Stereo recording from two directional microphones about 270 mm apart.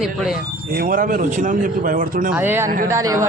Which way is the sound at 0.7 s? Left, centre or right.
Right.